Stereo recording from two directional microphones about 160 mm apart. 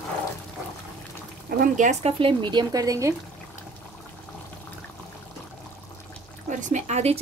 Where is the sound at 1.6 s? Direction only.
50° right (ahead or behind).